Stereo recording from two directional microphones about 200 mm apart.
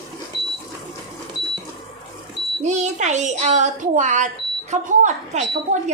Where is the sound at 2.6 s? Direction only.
35° right (ahead or behind).